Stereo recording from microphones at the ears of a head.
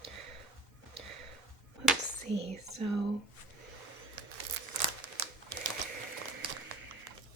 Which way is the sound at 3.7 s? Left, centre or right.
Right.